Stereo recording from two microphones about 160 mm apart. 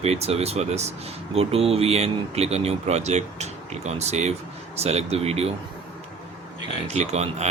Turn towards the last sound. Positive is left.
turn(degrees=-40)  # may be behind; listen again after turning